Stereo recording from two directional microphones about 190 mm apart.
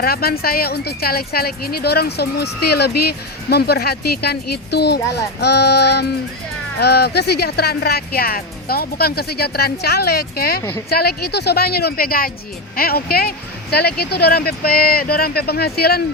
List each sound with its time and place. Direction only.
0.0 s speech: 55° left (ahead or behind)
10.6 s speech: 15° left (ahead or behind)
10.8 s speech: 55° left (ahead or behind)